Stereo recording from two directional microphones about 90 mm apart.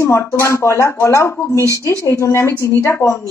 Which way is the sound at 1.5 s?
35° right (ahead or behind).